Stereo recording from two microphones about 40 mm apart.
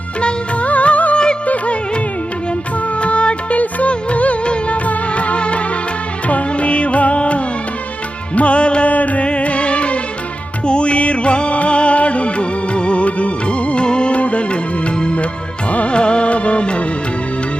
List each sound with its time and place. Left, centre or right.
0.2 s music of bollywood: left
0.7 s music: left
3.0 s music: left